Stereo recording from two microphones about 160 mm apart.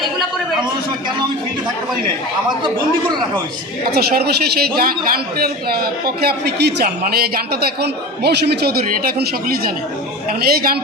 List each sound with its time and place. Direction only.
3.9 s a man's voice: 80° right